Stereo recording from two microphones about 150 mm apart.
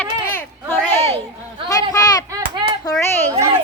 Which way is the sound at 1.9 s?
25° left (ahead or behind).